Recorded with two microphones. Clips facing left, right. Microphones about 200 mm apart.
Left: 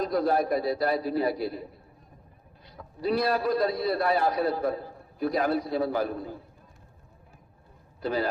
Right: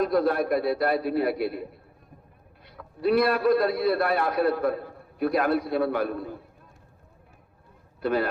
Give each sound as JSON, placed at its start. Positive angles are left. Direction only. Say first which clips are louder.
{"t": 0.0, "sound": "a man's voice", "louder": "right 2 dB", "side_deg": -60}
{"t": 2.6, "sound": "a man's voice", "louder": "right 4 dB", "side_deg": -60}
{"t": 8.0, "sound": "a man's voice", "louder": "right 3 dB", "side_deg": -60}